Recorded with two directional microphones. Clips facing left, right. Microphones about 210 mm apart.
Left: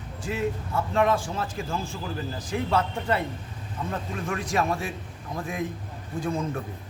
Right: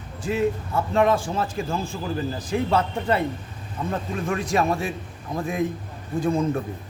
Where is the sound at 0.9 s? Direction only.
30° right (ahead or behind).